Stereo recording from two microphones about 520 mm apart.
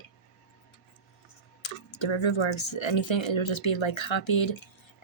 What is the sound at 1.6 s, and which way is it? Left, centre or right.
Speech, left.